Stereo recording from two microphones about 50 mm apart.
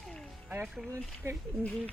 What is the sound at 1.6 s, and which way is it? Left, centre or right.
Speech, left.